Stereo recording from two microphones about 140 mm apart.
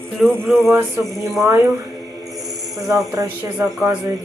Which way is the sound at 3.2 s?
25° right (ahead or behind).